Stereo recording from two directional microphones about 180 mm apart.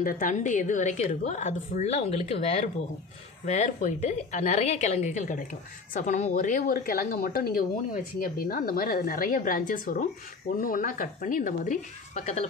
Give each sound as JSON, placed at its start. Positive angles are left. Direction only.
{"t": 0.0, "sound": "a woman's voice", "side_deg": 50}